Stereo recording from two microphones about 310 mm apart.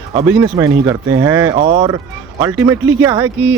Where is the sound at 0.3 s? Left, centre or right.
Centre.